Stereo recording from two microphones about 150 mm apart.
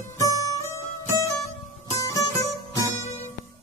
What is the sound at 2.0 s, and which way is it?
Music, 20° left (ahead or behind).